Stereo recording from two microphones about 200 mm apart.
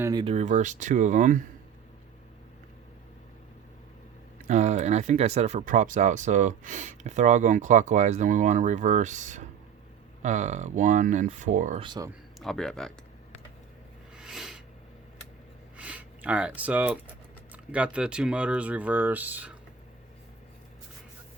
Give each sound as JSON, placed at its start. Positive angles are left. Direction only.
{"t": 0.0, "sound": "speech", "side_deg": -20}
{"t": 0.3, "sound": "speech", "side_deg": -35}
{"t": 4.4, "sound": "speech", "side_deg": -35}
{"t": 11.8, "sound": "speech", "side_deg": -20}
{"t": 12.4, "sound": "speech", "side_deg": 0}
{"t": 14.2, "sound": "a sound", "side_deg": 0}
{"t": 15.8, "sound": "speech", "side_deg": -5}